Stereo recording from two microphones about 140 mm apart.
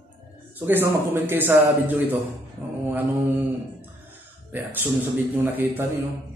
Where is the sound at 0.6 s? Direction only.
15° right (ahead or behind).